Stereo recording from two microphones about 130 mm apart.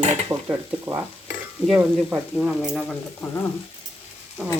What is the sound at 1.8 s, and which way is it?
Speech, 5° right (ahead or behind).